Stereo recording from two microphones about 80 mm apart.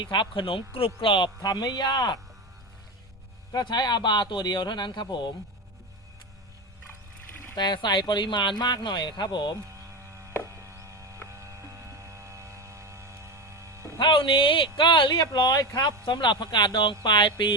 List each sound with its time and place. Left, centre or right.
0.0 s speech: left
1.4 s speech: left
3.5 s speech: left
7.5 s speech: left
10.4 s a sound: right
11.3 s vehicle: right
14.0 s speech: left
15.2 s speech: left